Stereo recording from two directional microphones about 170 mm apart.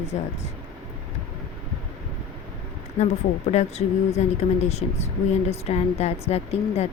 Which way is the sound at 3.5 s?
40° left (ahead or behind).